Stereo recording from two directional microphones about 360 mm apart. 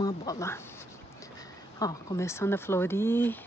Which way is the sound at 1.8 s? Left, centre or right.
Centre.